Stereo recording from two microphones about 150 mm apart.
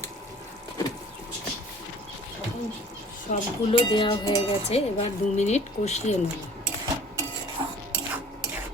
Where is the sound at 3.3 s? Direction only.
60° left (ahead or behind).